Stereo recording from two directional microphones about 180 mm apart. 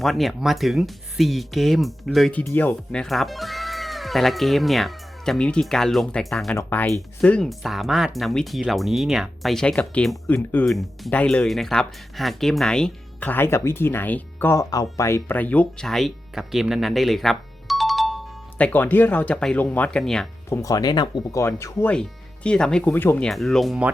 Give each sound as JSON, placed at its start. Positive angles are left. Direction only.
{"t": 0.0, "sound": "speech", "side_deg": 0}
{"t": 20.5, "sound": "speech", "side_deg": 20}
{"t": 22.4, "sound": "speech", "side_deg": 5}